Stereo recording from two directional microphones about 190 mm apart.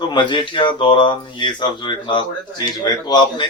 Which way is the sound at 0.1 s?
25° left (ahead or behind).